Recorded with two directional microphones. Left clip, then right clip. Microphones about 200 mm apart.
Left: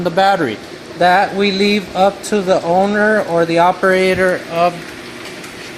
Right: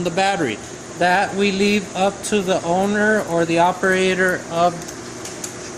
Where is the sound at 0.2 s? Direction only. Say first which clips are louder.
Left 6 dB; 15° left (ahead or behind).